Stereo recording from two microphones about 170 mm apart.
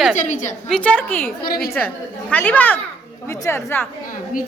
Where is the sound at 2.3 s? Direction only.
10° left (ahead or behind).